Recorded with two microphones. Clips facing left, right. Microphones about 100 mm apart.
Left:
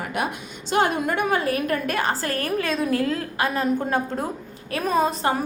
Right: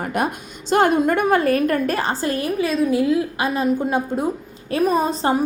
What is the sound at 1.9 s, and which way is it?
Speech, 25° right (ahead or behind).